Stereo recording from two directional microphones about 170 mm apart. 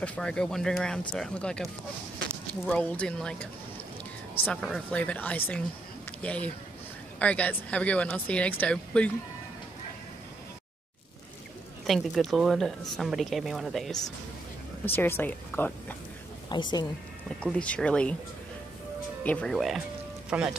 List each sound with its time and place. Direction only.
0.0 s a woman's voice: 5° left (ahead or behind)
4.5 s speech: centre (ahead or behind)
11.8 s a woman's voice: centre (ahead or behind)
14.9 s speech: 15° left (ahead or behind)
16.4 s a woman's voice: 25° left (ahead or behind)
17.4 s speech: 5° left (ahead or behind)
19.2 s a woman's voice: 5° left (ahead or behind)